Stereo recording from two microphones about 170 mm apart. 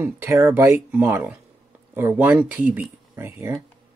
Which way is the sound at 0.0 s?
10° right (ahead or behind).